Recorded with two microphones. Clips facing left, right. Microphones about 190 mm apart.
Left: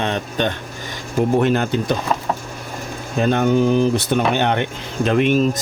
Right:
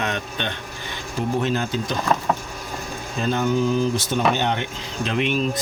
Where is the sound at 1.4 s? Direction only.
60° left (ahead or behind).